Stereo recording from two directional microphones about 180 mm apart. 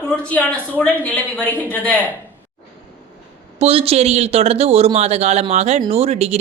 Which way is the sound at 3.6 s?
35° right (ahead or behind).